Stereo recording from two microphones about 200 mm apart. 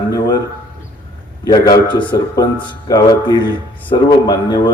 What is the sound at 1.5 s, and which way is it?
Speech, 20° left (ahead or behind).